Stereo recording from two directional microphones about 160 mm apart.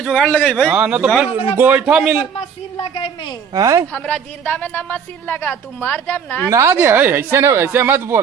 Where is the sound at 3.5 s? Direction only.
20° right (ahead or behind).